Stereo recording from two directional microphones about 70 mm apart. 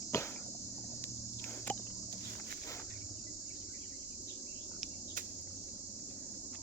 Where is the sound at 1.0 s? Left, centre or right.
Left.